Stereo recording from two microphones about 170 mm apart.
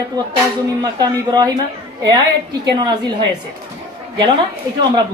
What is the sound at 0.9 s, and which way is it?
Speech, 20° right (ahead or behind).